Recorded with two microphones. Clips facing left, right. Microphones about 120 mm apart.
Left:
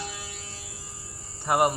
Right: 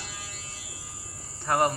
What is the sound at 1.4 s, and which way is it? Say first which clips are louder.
Cricket: left 2 dB; 15° left (ahead or behind).